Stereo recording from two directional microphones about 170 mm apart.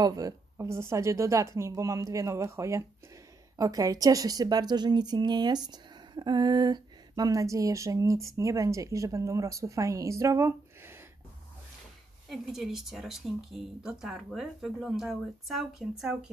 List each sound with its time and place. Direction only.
0.0 s a woman's voice: 20° right (ahead or behind)
12.3 s speech: centre (ahead or behind)